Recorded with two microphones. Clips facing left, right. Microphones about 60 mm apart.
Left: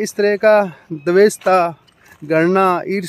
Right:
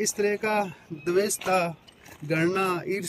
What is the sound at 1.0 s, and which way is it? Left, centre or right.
Speech, left.